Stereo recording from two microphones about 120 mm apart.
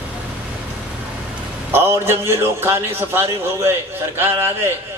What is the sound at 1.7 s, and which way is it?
A man's voice, 20° right (ahead or behind).